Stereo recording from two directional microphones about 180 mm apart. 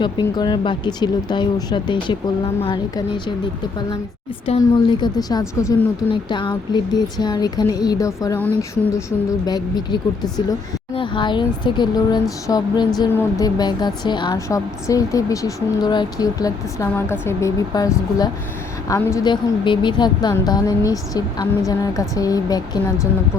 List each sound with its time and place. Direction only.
0.0 s a woman's voice: 25° left (ahead or behind)
4.4 s a woman's voice: 30° left (ahead or behind)
18.9 s a woman's voice: 15° left (ahead or behind)